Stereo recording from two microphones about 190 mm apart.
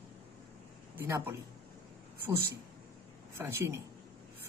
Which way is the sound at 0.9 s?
10° right (ahead or behind).